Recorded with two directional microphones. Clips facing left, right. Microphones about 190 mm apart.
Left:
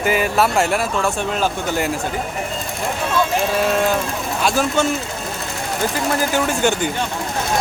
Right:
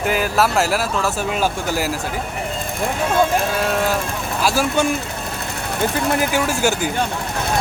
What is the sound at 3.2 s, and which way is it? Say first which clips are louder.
Speech: right 3 dB; 50° right (ahead or behind).